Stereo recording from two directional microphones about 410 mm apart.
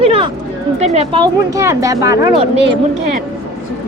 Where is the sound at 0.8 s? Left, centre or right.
Centre.